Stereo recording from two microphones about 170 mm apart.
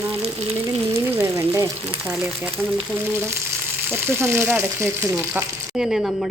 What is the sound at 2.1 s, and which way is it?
Speech, 10° right (ahead or behind).